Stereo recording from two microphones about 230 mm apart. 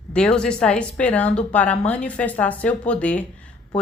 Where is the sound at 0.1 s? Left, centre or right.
Centre.